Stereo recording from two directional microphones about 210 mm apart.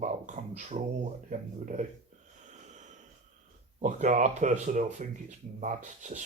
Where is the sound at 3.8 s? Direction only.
35° right (ahead or behind).